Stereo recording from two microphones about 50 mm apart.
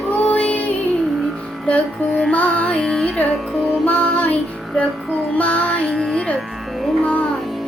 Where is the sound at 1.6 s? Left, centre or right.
Left.